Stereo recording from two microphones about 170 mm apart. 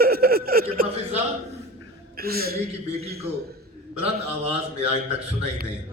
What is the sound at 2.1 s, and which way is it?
Speech, 65° right (ahead or behind).